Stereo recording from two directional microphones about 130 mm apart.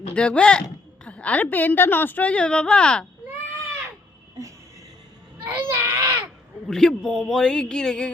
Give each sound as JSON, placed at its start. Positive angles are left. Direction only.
{"t": 0.1, "sound": "a woman's voice", "side_deg": 10}
{"t": 5.5, "sound": "baby cry", "side_deg": -15}
{"t": 6.7, "sound": "a man's voice", "side_deg": 5}